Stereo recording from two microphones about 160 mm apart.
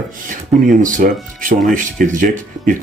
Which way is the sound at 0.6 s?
55° right (ahead or behind).